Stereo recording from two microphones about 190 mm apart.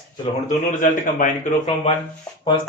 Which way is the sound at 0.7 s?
45° left (ahead or behind).